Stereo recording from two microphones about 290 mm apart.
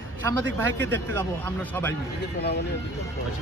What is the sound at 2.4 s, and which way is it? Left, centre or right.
Speech, left.